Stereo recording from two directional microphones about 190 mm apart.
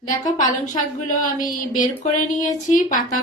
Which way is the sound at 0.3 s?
40° left (ahead or behind).